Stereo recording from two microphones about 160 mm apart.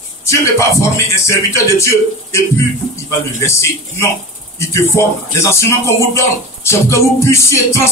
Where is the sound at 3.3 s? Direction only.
15° left (ahead or behind).